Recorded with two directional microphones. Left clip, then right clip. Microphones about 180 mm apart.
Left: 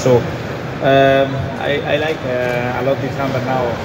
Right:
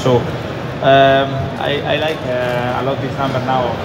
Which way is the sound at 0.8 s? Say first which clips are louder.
Right 2 dB; 50° left (ahead or behind).